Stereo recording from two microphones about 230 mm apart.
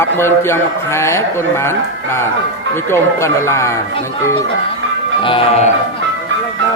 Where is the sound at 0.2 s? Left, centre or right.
Centre.